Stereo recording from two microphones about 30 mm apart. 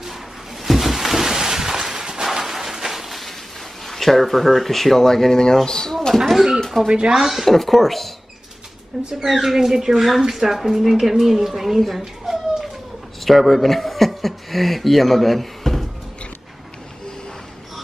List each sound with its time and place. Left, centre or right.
0.7 s a sound: centre
2.2 s a sound: centre
3.8 s speech: centre
6.2 s speech: centre
6.8 s speech: centre
7.1 s a woman's voice: centre
7.4 s speech: centre
9.1 s a woman's voice: centre
13.2 s speech: centre